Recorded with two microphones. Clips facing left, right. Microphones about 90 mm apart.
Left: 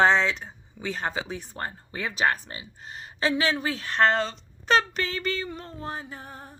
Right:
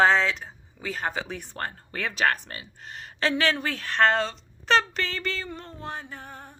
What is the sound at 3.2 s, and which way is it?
A woman's voice, 10° left (ahead or behind).